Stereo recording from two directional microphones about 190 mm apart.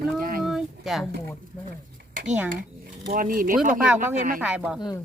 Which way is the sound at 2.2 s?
5° right (ahead or behind).